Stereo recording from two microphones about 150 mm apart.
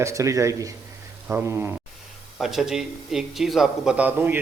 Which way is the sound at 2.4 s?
Centre (ahead or behind).